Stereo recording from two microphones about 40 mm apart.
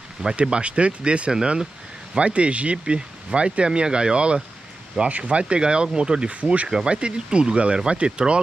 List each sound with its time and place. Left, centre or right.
0.4 s speech: right
1.3 s speech: centre
2.1 s speech: right
6.3 s speech: right